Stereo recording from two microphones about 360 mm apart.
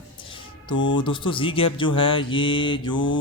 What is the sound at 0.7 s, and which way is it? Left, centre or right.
Speech, left.